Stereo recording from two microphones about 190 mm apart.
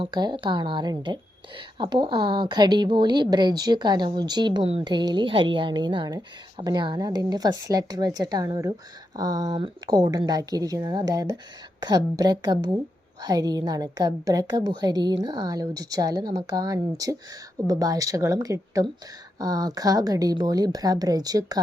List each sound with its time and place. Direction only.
0.0 s a woman's voice: 20° right (ahead or behind)